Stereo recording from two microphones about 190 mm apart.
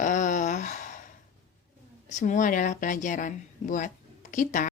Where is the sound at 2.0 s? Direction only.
40° left (ahead or behind).